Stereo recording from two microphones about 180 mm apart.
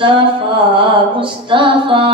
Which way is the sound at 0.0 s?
25° right (ahead or behind).